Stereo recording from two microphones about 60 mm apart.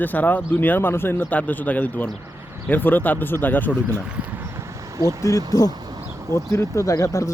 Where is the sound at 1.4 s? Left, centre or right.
Left.